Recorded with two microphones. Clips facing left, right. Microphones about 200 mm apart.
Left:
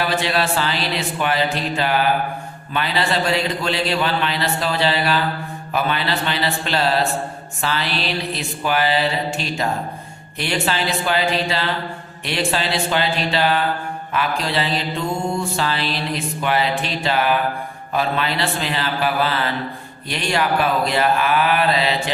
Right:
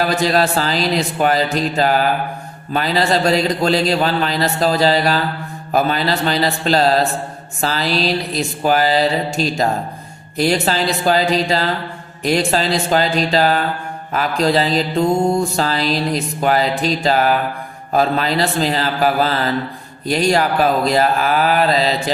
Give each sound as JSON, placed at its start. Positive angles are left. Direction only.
{"t": 0.0, "sound": "mantra", "side_deg": -40}